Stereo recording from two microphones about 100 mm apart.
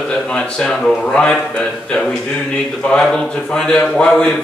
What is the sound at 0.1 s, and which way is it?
A man's voice, 10° left (ahead or behind).